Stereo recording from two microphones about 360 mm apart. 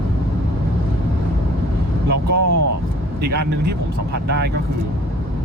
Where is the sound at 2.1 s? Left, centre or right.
Right.